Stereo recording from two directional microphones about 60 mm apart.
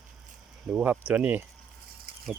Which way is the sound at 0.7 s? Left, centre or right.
Right.